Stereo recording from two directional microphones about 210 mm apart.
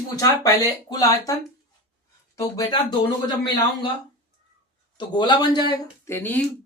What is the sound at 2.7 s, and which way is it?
Speech, 20° left (ahead or behind).